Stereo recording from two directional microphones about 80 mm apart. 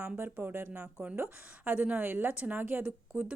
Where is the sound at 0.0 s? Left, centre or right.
Right.